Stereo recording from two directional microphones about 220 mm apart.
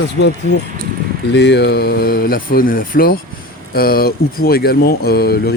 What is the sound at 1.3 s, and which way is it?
Speech, 50° left (ahead or behind).